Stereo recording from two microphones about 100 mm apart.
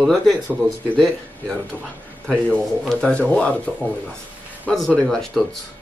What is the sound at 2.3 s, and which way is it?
Speech, 10° left (ahead or behind).